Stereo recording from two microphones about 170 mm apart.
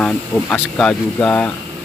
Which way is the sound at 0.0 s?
5° left (ahead or behind).